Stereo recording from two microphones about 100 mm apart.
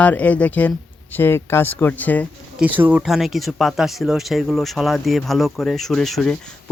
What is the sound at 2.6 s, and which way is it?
Speech, 15° right (ahead or behind).